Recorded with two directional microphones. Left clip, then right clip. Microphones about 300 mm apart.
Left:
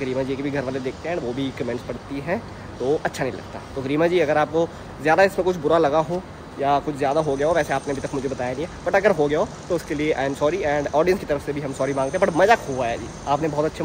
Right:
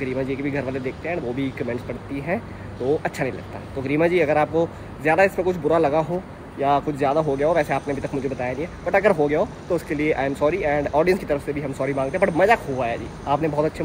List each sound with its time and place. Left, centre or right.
0.0 s speech: centre